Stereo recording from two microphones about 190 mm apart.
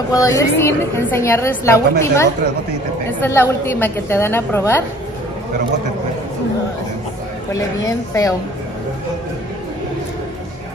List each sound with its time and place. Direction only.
0.1 s a woman's voice: 20° left (ahead or behind)
7.5 s a woman's voice: 15° left (ahead or behind)